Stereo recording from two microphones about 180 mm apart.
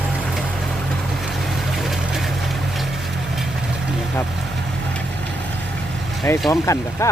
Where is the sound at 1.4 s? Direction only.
Centre (ahead or behind).